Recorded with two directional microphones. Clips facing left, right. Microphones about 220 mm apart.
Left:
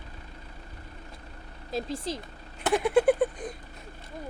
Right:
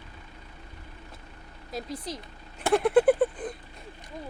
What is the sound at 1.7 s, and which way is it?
Speech, 25° left (ahead or behind).